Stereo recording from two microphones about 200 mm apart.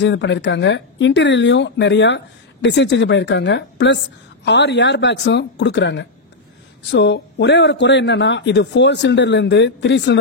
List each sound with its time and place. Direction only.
0.0 s speech: 65° left (ahead or behind)